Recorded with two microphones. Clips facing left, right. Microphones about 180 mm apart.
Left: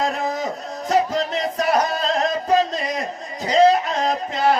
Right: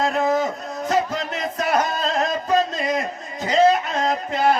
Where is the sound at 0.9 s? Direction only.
35° left (ahead or behind).